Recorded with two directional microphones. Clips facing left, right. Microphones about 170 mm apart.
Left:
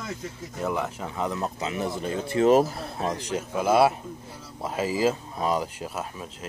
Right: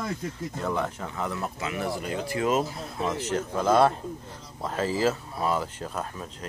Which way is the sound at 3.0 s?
15° left (ahead or behind).